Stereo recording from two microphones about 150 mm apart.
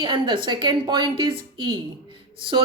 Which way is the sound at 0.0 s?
35° right (ahead or behind).